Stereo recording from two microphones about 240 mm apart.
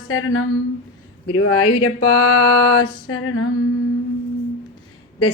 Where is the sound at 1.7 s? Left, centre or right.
Left.